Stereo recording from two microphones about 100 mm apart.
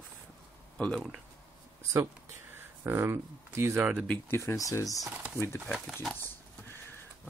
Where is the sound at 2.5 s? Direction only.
25° right (ahead or behind).